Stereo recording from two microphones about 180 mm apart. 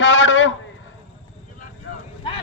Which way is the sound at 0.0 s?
90° left.